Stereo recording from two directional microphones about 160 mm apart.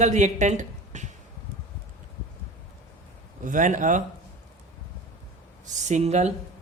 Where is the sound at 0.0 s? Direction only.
50° right (ahead or behind).